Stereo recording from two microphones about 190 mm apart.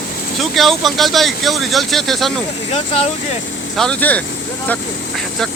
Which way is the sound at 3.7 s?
5° left (ahead or behind).